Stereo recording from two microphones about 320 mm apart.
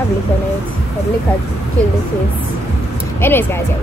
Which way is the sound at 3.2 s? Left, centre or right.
Centre.